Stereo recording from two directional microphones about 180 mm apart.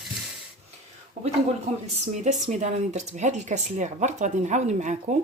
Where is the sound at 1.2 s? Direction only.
40° right (ahead or behind).